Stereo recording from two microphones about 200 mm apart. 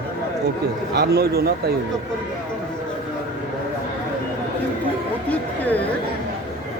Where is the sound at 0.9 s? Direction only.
55° right (ahead or behind).